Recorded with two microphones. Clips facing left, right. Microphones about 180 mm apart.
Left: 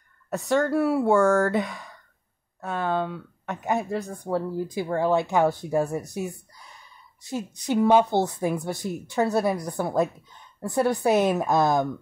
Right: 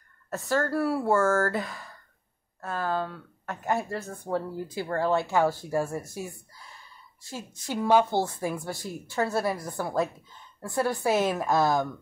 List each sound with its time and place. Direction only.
0.3 s speech: centre (ahead or behind)
0.7 s speech: 15° left (ahead or behind)
1.0 s speech: centre (ahead or behind)
3.6 s a woman's voice: 15° left (ahead or behind)